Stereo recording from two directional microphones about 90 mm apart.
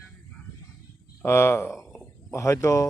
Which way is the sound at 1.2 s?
30° left (ahead or behind).